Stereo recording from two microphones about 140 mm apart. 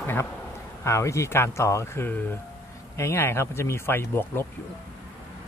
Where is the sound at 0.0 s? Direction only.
15° left (ahead or behind).